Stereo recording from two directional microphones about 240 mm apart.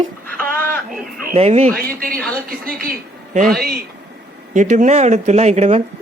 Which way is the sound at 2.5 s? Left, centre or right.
Right.